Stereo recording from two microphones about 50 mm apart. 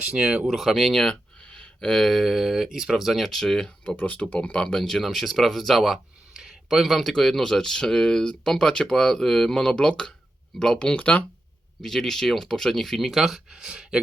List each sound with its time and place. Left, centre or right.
0.0 s speech: centre
0.4 s speech: centre
0.9 s speech: centre
1.4 s speech: left; by 3.2 s centre
3.2 s speech: centre
3.8 s speech: left
4.7 s speech: centre
10.9 s speech: left
11.8 s speech: centre